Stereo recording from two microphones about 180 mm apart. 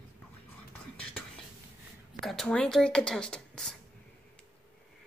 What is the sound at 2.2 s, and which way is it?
Speech, centre (ahead or behind).